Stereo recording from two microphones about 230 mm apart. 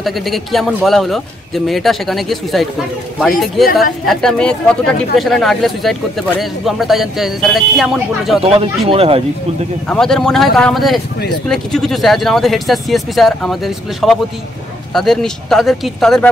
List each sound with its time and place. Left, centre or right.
0.0 s speech: centre
8.4 s speech: right
9.8 s speech: centre